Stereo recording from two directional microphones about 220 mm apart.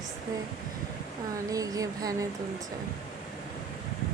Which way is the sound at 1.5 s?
15° right (ahead or behind).